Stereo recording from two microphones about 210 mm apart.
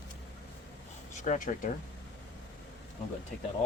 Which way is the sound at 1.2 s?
35° left (ahead or behind).